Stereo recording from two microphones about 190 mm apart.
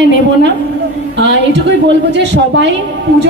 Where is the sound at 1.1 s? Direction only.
70° right (ahead or behind).